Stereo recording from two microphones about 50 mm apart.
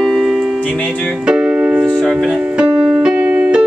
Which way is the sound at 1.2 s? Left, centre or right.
Centre.